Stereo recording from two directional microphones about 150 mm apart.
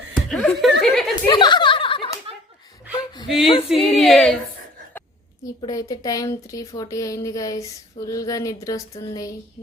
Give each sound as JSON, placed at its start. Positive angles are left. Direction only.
{"t": 0.3, "sound": "speech", "side_deg": 5}
{"t": 1.3, "sound": "a sound", "side_deg": 30}
{"t": 2.3, "sound": "slap", "side_deg": -40}
{"t": 3.2, "sound": "speech", "side_deg": 0}
{"t": 5.6, "sound": "speech", "side_deg": 25}